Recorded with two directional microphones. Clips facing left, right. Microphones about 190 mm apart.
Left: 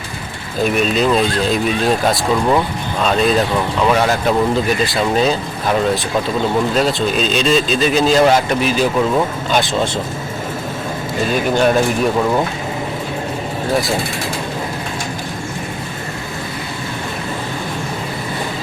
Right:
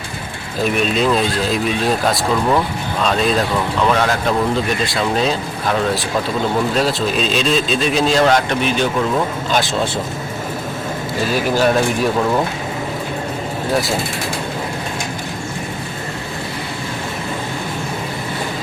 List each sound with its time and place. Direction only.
0.6 s speech: centre (ahead or behind)
11.3 s speech: 5° right (ahead or behind)